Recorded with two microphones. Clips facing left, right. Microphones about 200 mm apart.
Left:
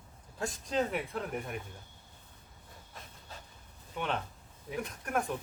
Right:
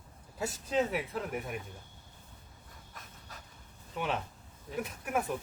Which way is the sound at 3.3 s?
30° left (ahead or behind).